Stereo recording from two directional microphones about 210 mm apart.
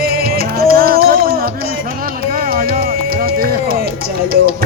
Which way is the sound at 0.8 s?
45° right (ahead or behind).